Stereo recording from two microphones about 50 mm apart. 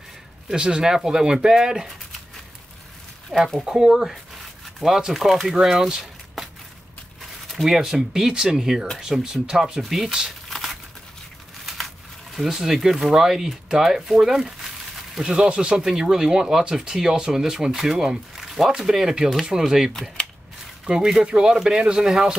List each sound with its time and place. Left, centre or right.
0.5 s speech: centre
3.3 s speech: centre
3.6 s speech: centre
7.5 s speech: centre
10.5 s patter: centre
11.6 s crumpling: centre
12.4 s speech: centre
19.9 s speech: centre
20.8 s speech: centre